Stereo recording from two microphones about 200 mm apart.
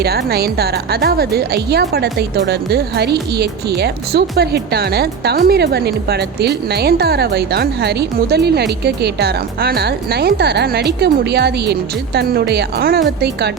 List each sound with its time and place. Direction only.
0.0 s speech: 50° right (ahead or behind)